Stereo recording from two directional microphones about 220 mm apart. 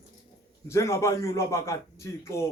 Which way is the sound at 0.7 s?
10° left (ahead or behind).